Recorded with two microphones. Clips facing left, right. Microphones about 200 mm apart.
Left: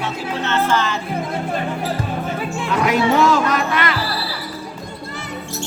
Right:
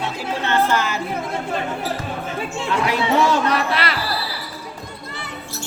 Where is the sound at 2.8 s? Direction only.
35° right (ahead or behind).